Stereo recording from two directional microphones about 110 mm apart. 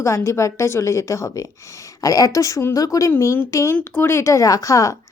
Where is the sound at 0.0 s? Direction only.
25° left (ahead or behind).